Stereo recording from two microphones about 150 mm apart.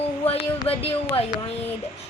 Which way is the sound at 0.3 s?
40° left (ahead or behind).